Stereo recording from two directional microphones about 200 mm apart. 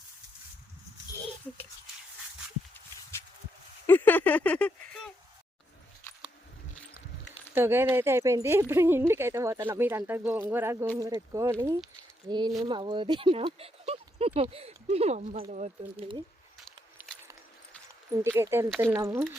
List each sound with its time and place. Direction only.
3.8 s a sound: 10° left (ahead or behind)
7.5 s speech: 10° right (ahead or behind); by 16.2 s 25° right (ahead or behind)
18.1 s speech: 15° right (ahead or behind)